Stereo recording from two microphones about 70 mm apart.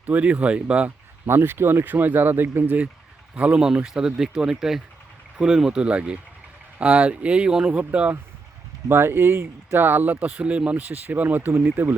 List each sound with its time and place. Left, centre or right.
0.0 s speech: right
1.3 s speech: right; by 7.9 s centre
8.9 s speech: right